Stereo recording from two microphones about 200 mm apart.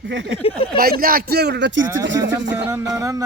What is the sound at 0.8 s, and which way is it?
Speech, 45° right (ahead or behind).